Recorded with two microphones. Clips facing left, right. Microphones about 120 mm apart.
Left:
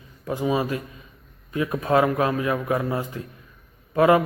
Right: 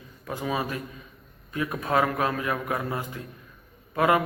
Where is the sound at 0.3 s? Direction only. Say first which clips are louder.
Left 6 dB; 20° left (ahead or behind).